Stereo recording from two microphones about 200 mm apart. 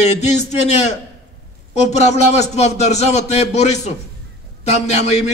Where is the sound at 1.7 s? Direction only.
35° left (ahead or behind).